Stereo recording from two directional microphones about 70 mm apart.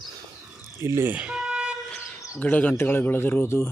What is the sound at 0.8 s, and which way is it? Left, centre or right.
Speech, right.